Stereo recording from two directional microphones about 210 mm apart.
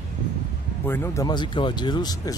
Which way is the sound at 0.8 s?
10° left (ahead or behind).